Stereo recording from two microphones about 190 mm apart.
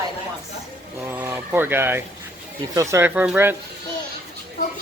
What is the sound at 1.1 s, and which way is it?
Speech, 10° right (ahead or behind).